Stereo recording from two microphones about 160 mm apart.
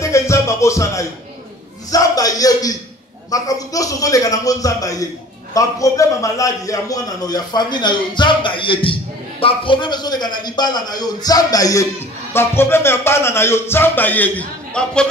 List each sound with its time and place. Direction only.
0.0 s music: 20° left (ahead or behind)
1.9 s a man's voice: 20° left (ahead or behind); by 15.0 s 5° left (ahead or behind)